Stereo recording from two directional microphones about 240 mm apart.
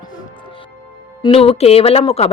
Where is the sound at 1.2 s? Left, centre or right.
Left.